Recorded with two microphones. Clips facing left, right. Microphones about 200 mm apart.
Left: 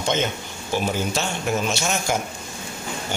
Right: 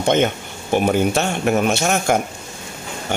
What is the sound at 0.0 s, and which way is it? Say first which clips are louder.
A man's voice: right 7 dB; 55° right (ahead or behind).